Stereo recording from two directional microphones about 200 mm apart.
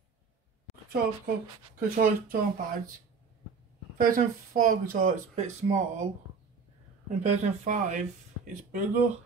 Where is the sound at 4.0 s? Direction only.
45° right (ahead or behind).